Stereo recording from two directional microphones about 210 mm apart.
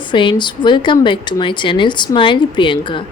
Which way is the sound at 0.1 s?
20° left (ahead or behind).